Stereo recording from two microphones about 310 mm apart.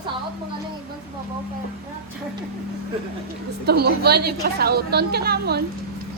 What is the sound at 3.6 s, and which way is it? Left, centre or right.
A woman's voice, right.